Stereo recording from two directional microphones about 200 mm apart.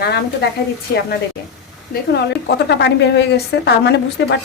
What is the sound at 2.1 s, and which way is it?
A woman's voice, 55° left (ahead or behind).